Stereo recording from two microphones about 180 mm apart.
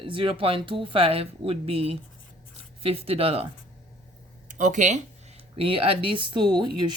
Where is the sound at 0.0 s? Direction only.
30° right (ahead or behind).